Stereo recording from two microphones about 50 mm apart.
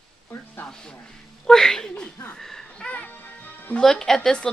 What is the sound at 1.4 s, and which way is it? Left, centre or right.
Speech, centre.